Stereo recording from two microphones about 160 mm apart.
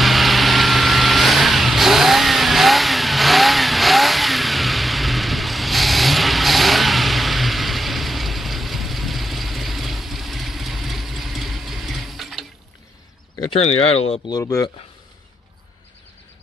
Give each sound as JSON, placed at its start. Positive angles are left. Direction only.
{"t": 0.0, "sound": "vehicle", "side_deg": 0}
{"t": 13.5, "sound": "speech", "side_deg": 40}
{"t": 14.2, "sound": "speech", "side_deg": 20}